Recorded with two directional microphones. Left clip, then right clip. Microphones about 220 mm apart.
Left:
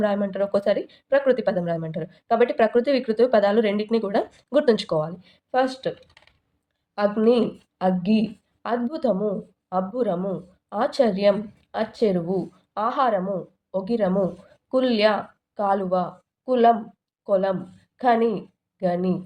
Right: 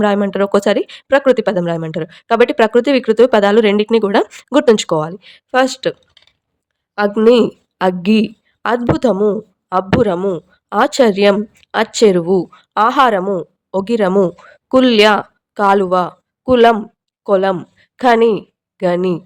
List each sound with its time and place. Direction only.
0.0 s speech: 30° right (ahead or behind)
6.9 s a woman's voice: 30° right (ahead or behind)